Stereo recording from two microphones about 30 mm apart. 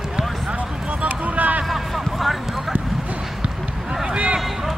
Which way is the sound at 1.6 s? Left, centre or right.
Centre.